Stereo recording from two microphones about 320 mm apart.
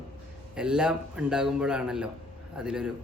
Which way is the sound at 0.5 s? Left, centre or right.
Centre.